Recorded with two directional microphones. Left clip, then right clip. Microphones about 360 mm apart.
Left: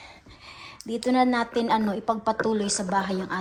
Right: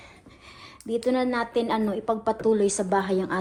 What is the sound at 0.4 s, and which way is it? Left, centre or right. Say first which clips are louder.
A woman's voice: right 1 dB; centre.